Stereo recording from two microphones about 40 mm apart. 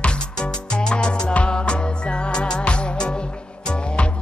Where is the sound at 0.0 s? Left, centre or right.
Left.